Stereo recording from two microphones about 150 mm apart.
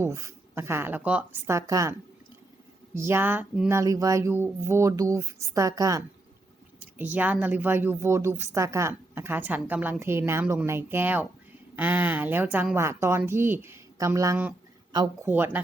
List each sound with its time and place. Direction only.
0.0 s speech: 20° right (ahead or behind)
3.7 s speech: 20° right (ahead or behind)
6.7 s speech: 10° right (ahead or behind)
15.3 s speech: 10° right (ahead or behind)